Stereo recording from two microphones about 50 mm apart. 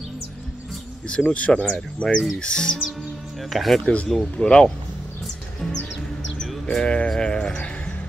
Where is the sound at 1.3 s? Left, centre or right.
Left.